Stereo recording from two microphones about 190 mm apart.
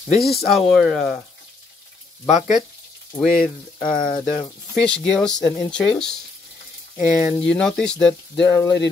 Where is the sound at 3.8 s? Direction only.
25° left (ahead or behind).